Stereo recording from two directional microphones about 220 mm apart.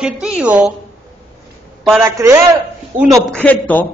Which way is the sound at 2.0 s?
10° right (ahead or behind).